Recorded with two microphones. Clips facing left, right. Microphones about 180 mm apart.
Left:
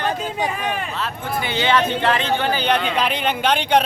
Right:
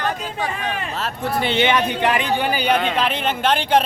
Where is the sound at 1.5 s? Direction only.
20° right (ahead or behind).